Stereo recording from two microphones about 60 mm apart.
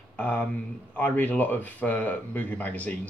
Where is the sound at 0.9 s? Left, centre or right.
Left.